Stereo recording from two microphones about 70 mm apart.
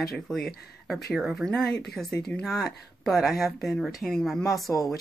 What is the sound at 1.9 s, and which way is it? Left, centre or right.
Speech, centre.